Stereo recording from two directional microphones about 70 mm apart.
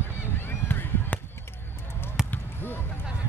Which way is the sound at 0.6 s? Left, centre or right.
Left.